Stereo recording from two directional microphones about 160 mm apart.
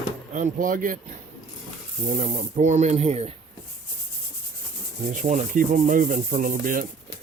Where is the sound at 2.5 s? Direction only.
45° right (ahead or behind).